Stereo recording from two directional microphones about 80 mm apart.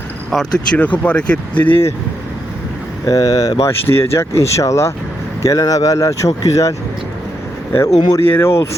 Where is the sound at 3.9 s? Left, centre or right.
Left.